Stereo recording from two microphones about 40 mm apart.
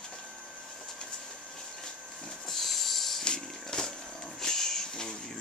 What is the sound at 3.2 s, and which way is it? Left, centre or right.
Wild animals, centre.